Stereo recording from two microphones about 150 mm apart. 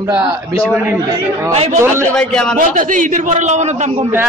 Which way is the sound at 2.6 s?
60° right (ahead or behind).